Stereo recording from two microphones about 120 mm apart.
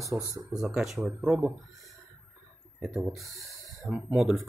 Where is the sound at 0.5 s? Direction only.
5° right (ahead or behind).